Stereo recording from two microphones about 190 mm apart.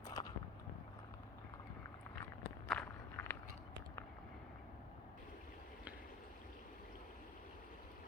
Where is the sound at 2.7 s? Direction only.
Centre (ahead or behind).